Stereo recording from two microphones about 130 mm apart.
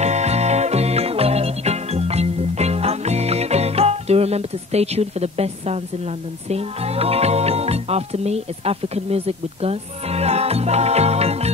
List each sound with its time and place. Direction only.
0.0 s music: 60° right (ahead or behind)
6.5 s speech: 50° right (ahead or behind)